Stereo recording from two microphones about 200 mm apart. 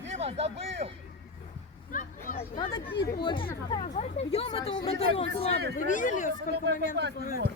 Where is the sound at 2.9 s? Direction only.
50° left (ahead or behind).